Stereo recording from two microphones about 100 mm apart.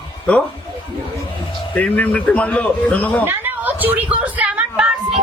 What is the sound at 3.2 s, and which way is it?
A woman's voice, 20° right (ahead or behind).